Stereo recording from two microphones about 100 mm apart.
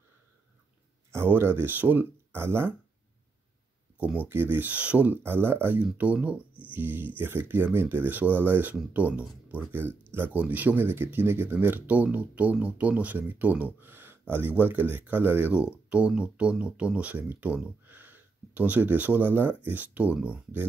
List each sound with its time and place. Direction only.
1.1 s speech: 25° right (ahead or behind)
4.0 s speech: 15° right (ahead or behind)